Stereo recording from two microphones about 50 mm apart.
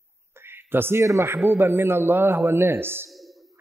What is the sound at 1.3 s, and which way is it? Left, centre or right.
A man's voice, right.